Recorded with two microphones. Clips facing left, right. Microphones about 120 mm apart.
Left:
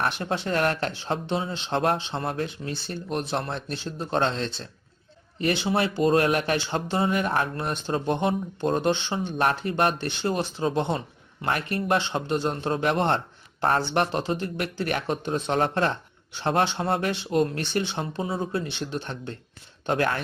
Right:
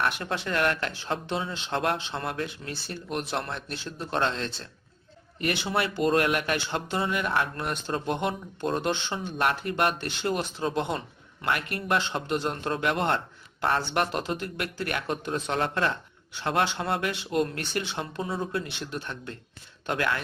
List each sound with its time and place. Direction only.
0.0 s speech: 30° left (ahead or behind)
2.0 s speech: 20° left (ahead or behind)
2.2 s speech: 35° left (ahead or behind)
5.7 s speech: 35° left (ahead or behind)
7.5 s speech: 25° left (ahead or behind)
9.4 s speech: 35° left (ahead or behind)
11.4 s speech: 40° left (ahead or behind)
11.9 s speech: 25° left (ahead or behind)
12.9 s a sound: 30° left (ahead or behind)
13.7 s speech: 35° left (ahead or behind)
14.1 s speech: 25° left (ahead or behind)
15.5 s speech: 40° left (ahead or behind)
16.4 s speech: 30° left (ahead or behind)